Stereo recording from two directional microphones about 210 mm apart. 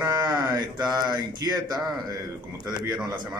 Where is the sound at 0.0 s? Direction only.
10° right (ahead or behind).